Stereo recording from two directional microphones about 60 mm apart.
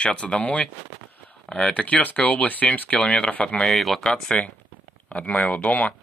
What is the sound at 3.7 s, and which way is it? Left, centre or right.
Speech, centre.